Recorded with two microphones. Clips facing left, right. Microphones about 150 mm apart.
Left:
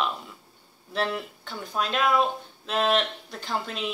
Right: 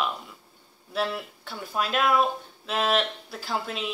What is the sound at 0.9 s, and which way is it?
Speech, 5° right (ahead or behind).